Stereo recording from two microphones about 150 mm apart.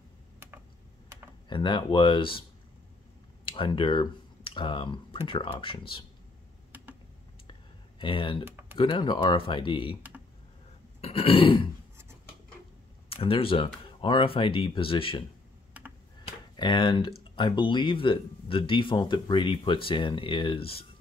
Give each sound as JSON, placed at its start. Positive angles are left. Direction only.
{"t": 1.5, "sound": "speech", "side_deg": 30}
{"t": 3.4, "sound": "speech", "side_deg": 35}
{"t": 8.0, "sound": "speech", "side_deg": 35}
{"t": 8.5, "sound": "a sound", "side_deg": -15}
{"t": 8.7, "sound": "speech", "side_deg": 30}
{"t": 11.0, "sound": "grunt", "side_deg": 40}
{"t": 13.1, "sound": "speech", "side_deg": 40}
{"t": 16.5, "sound": "speech", "side_deg": 30}